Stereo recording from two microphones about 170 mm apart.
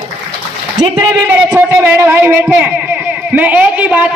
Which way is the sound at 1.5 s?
10° right (ahead or behind).